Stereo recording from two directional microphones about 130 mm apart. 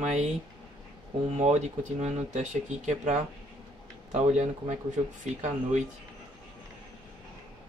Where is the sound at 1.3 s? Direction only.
60° right (ahead or behind).